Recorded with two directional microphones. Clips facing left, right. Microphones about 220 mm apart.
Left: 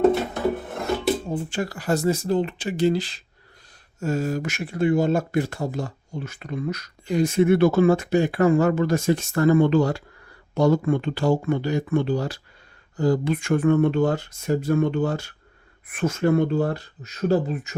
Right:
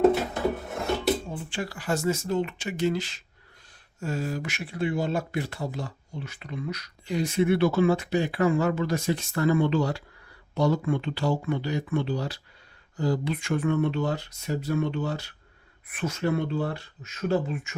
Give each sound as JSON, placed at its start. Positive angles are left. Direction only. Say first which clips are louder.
{"t": 0.0, "sound": "filing", "louder": "left 2 dB", "side_deg": 0}
{"t": 1.3, "sound": "speech", "louder": "left 6 dB", "side_deg": 45}
{"t": 4.0, "sound": "speech", "louder": "left 6 dB", "side_deg": 45}